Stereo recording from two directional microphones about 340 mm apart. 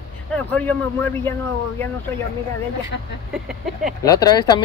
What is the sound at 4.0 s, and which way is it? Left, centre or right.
Speech, centre.